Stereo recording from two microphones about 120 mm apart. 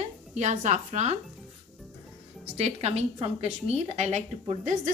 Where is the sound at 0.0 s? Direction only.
75° right (ahead or behind).